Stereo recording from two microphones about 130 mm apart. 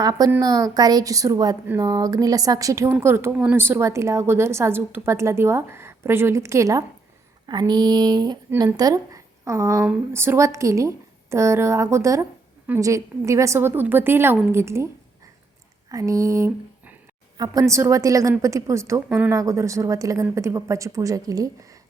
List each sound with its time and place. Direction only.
0.0 s speech: 30° right (ahead or behind)
15.9 s speech: 25° right (ahead or behind)
19.0 s speech: 10° right (ahead or behind)
19.3 s speech: 25° right (ahead or behind)